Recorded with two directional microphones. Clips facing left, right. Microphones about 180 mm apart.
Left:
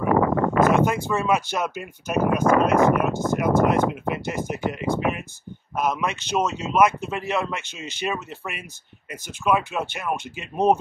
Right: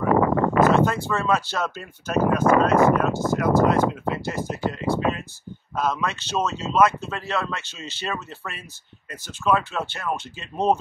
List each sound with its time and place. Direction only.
0.6 s speech: 15° left (ahead or behind)